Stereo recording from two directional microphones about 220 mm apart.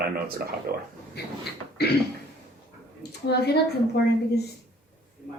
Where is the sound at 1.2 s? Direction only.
45° left (ahead or behind).